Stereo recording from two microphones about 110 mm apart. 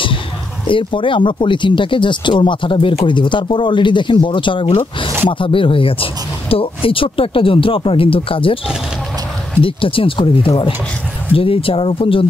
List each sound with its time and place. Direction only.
0.7 s speech: 50° left (ahead or behind)
9.6 s speech: 55° left (ahead or behind)